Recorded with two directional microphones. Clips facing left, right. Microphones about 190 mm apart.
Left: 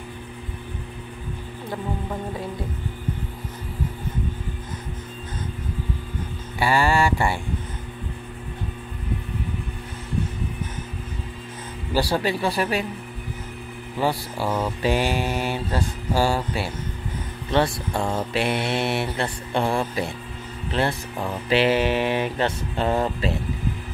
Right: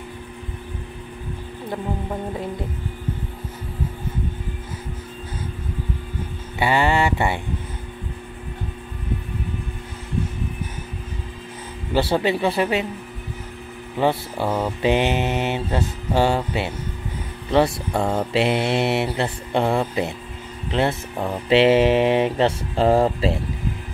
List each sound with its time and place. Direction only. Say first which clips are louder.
6.6 s a sound: right 1 dB; 20° right (ahead or behind)
11.9 s mantra: right 3 dB; 20° right (ahead or behind)
13.9 s mantra: right 3 dB; 25° right (ahead or behind)
17.5 s speech: right 3 dB; 25° right (ahead or behind)
17.9 s mantra: right 4 dB; 5° right (ahead or behind)
18.3 s mantra: right 5 dB; 25° right (ahead or behind)